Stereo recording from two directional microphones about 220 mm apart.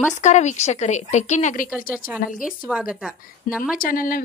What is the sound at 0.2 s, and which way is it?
A woman's voice, 35° left (ahead or behind).